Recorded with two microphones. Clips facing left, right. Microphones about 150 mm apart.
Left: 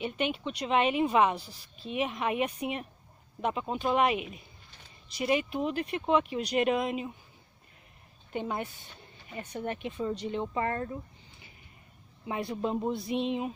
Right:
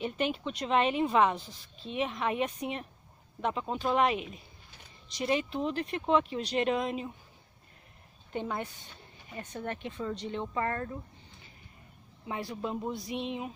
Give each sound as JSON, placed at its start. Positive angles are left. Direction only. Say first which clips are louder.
{"t": 0.0, "sound": "a woman's voice", "louder": "even", "side_deg": 5}
{"t": 8.3, "sound": "a woman's voice", "louder": "left 1 dB", "side_deg": 15}
{"t": 12.3, "sound": "speech", "louder": "left 4 dB", "side_deg": 25}